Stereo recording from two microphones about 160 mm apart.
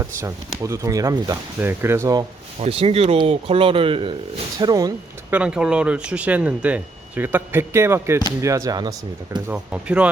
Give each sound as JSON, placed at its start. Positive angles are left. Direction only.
{"t": 0.0, "sound": "speech", "side_deg": -15}
{"t": 2.6, "sound": "speech", "side_deg": -35}
{"t": 5.3, "sound": "speech", "side_deg": -5}
{"t": 9.5, "sound": "speech", "side_deg": -5}